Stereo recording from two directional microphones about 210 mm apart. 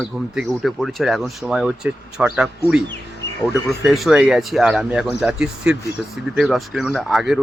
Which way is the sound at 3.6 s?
Centre (ahead or behind).